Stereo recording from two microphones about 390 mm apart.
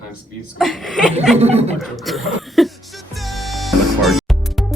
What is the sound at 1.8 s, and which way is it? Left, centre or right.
Speech, centre.